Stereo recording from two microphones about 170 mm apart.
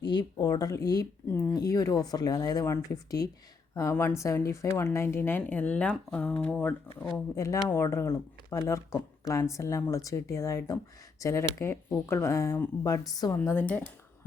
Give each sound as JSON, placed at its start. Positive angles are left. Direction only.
{"t": 0.1, "sound": "a woman's voice", "side_deg": 25}
{"t": 7.3, "sound": "a woman's voice", "side_deg": 20}